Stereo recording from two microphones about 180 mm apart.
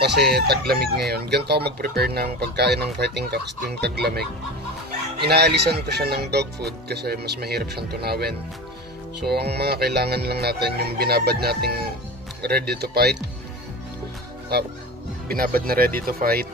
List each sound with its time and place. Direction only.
0.0 s speech: 65° right (ahead or behind)
5.2 s speech: 65° right (ahead or behind)
15.2 s speech: 55° right (ahead or behind)